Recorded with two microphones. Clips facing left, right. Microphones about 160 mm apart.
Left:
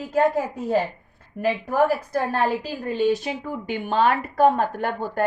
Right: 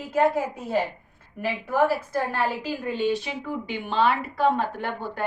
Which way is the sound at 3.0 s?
45° left (ahead or behind).